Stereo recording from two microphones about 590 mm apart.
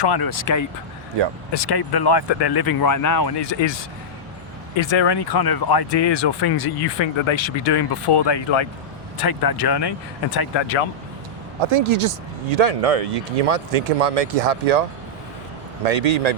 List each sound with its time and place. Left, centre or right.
0.0 s speech: left
4.8 s speech: left
9.1 s speech: left
11.6 s speech: right
12.5 s speech: right